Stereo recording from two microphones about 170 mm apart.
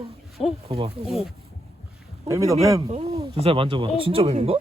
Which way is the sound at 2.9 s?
35° right (ahead or behind).